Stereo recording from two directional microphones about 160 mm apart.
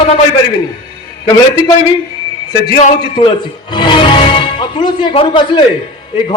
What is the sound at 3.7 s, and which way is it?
Music, 30° left (ahead or behind).